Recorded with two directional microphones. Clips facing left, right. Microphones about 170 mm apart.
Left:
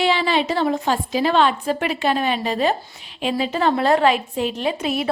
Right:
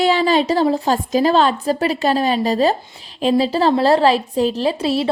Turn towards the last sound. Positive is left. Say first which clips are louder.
# right 4 dB
turn(degrees=-30)  # may be behind; listen again after turning